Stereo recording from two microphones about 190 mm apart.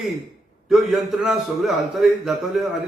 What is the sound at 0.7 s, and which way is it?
A man's voice, centre (ahead or behind).